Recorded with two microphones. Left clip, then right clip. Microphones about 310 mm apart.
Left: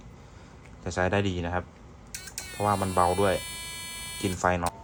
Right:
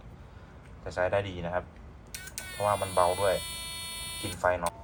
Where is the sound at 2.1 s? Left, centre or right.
Centre.